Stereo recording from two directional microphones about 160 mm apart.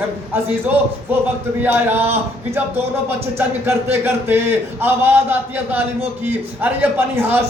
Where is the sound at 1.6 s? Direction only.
15° right (ahead or behind).